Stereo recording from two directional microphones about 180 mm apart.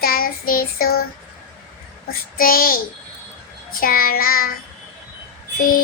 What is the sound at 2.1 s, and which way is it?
Child singing, 55° left (ahead or behind).